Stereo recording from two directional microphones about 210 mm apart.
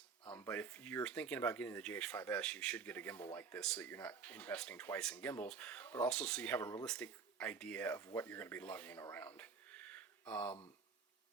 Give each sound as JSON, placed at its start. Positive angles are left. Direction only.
{"t": 0.3, "sound": "speech", "side_deg": 10}
{"t": 6.6, "sound": "speech", "side_deg": 15}
{"t": 6.8, "sound": "speech", "side_deg": 5}